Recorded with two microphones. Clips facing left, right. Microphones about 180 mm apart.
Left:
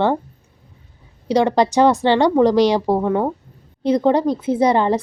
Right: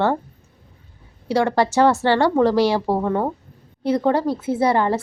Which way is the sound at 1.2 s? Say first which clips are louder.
Left 3 dB; 20° left (ahead or behind).